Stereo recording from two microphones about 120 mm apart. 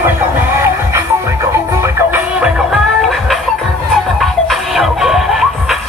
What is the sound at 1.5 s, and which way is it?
Music, 20° right (ahead or behind).